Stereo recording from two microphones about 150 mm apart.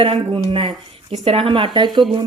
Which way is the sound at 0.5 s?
35° right (ahead or behind).